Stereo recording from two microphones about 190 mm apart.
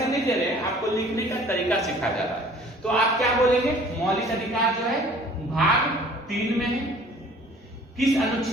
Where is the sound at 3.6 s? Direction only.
Centre (ahead or behind).